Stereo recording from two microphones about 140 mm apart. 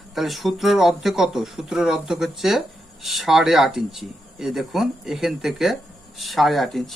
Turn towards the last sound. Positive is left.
turn(degrees=0)  # may be behind; listen again after turning